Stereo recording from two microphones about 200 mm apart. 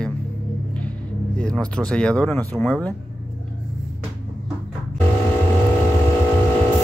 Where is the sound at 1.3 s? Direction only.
5° left (ahead or behind).